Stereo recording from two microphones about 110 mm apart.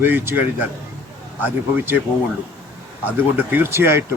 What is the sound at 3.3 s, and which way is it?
Speech, 20° right (ahead or behind).